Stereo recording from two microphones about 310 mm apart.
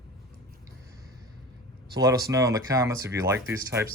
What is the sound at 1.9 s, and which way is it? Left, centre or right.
Speech, centre.